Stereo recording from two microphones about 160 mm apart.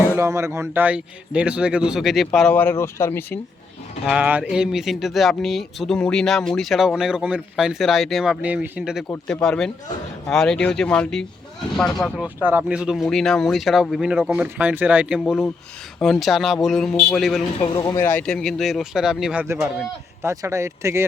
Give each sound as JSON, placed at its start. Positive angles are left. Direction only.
{"t": 0.1, "sound": "speech", "side_deg": -15}
{"t": 4.0, "sound": "speech", "side_deg": -5}
{"t": 12.2, "sound": "speech", "side_deg": -10}
{"t": 15.2, "sound": "speech", "side_deg": 5}
{"t": 17.6, "sound": "speech", "side_deg": 25}
{"t": 18.1, "sound": "speech", "side_deg": 5}